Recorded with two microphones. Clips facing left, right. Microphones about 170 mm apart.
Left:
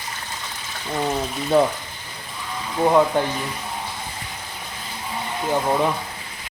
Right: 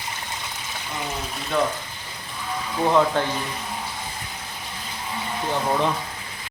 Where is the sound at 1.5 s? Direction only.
30° left (ahead or behind).